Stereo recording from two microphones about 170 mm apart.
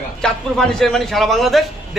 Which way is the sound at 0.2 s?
5° left (ahead or behind).